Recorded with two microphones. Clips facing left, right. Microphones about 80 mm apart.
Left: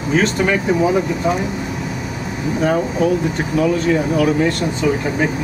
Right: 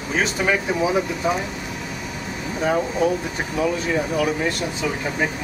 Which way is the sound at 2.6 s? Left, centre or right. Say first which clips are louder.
Left 3 dB; centre.